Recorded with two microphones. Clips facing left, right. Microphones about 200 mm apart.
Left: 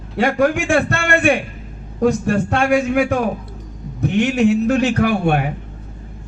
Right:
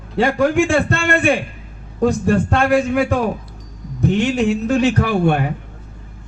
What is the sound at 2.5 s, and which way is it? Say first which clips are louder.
Speech: left 1 dB; 55° right (ahead or behind).